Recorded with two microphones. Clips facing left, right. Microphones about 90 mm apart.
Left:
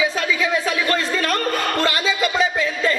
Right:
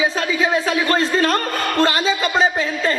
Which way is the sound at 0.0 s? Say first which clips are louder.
Right 2 dB; 35° right (ahead or behind).